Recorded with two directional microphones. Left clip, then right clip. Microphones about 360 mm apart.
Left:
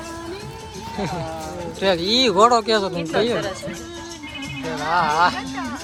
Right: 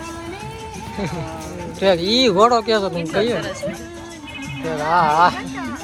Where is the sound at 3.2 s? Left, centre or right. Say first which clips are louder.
Right 1 dB; centre.